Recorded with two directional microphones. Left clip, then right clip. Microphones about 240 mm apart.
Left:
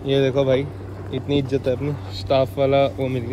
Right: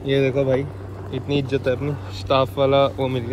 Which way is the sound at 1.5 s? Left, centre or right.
Centre.